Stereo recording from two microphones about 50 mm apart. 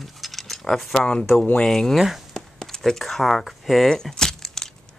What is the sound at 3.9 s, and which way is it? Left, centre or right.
Crack, centre.